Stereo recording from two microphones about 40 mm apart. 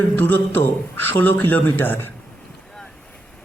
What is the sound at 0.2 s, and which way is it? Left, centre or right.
A man's voice, left.